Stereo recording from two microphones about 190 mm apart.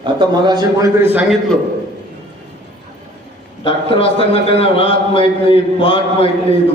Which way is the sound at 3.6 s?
30° left (ahead or behind).